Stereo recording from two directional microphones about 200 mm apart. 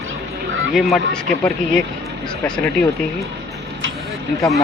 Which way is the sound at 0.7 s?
Centre (ahead or behind).